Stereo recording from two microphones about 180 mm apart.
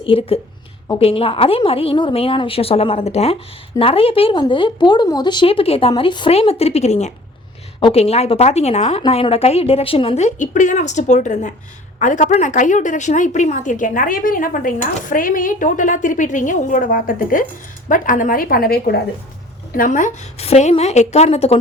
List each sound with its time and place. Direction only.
0.0 s a woman's voice: 30° left (ahead or behind)